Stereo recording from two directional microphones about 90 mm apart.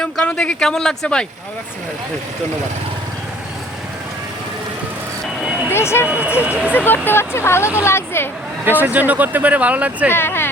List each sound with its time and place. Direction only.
0.0 s speech: 10° left (ahead or behind)
5.7 s speech: 30° left (ahead or behind)
6.1 s speech: 15° right (ahead or behind)
6.7 s speech: 20° left (ahead or behind)
8.6 s speech: 20° right (ahead or behind)
10.1 s speech: 25° left (ahead or behind)